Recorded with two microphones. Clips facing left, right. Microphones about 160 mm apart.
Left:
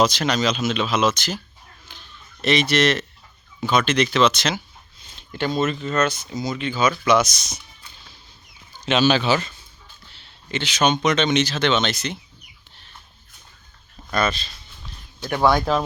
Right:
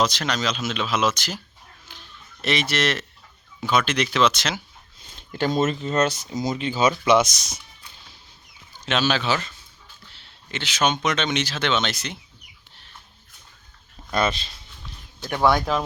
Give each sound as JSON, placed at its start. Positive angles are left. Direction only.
{"t": 0.0, "sound": "speech", "side_deg": 5}
{"t": 1.9, "sound": "a sound", "side_deg": -5}
{"t": 3.6, "sound": "speech", "side_deg": -5}
{"t": 5.4, "sound": "speech", "side_deg": -40}
{"t": 6.9, "sound": "speech", "side_deg": -20}
{"t": 8.9, "sound": "speech", "side_deg": 0}
{"t": 14.1, "sound": "speech", "side_deg": -20}
{"t": 15.3, "sound": "speech", "side_deg": 20}